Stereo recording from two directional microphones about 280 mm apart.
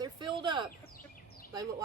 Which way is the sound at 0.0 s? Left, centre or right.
Centre.